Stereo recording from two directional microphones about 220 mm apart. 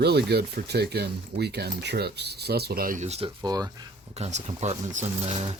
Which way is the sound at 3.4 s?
15° right (ahead or behind).